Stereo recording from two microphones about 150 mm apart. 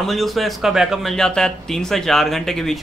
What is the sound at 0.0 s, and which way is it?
Speech, centre (ahead or behind).